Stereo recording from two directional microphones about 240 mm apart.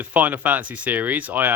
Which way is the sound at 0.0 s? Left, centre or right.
Centre.